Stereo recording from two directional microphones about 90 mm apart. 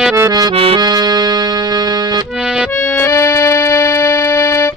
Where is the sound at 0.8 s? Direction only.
50° right (ahead or behind).